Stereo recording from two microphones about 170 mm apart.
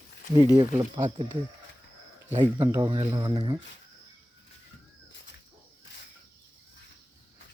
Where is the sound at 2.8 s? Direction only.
25° right (ahead or behind).